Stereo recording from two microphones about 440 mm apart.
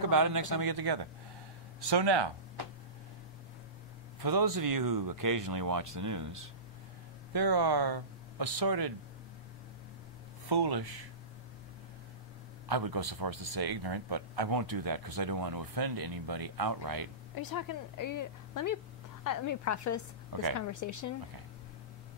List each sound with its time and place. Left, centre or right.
0.0 s speech: right
4.2 s speech: right
7.3 s speech: right
10.5 s speech: right
12.6 s speech: right
17.4 s a woman's voice: left